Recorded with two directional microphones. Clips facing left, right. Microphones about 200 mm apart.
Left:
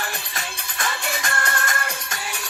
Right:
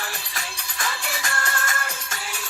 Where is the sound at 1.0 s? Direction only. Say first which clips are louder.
Left 3 dB; 60° left (ahead or behind).